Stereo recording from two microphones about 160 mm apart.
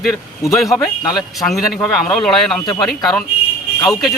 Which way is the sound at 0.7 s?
25° left (ahead or behind).